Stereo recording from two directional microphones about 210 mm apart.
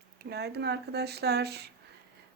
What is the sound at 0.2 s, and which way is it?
Speech, 50° right (ahead or behind).